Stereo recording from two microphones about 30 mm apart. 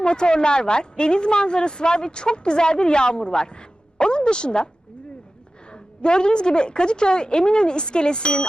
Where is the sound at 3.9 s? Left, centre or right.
Left.